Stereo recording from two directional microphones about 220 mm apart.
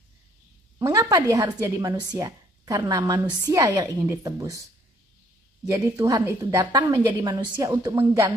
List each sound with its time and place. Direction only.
0.7 s a woman's voice: 15° right (ahead or behind)
5.7 s a woman's voice: 15° right (ahead or behind)